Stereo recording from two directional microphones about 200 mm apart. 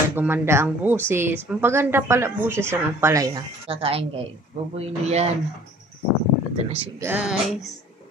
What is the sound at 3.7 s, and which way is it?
A woman's voice, 30° right (ahead or behind).